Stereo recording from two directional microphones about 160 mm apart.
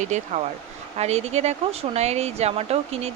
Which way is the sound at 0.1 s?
45° right (ahead or behind).